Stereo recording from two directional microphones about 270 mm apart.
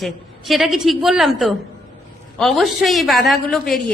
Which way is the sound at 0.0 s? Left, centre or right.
Centre.